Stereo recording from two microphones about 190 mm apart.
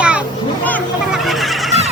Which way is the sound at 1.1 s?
Centre (ahead or behind).